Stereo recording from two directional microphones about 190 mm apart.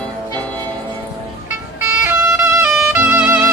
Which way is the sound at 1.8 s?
10° right (ahead or behind).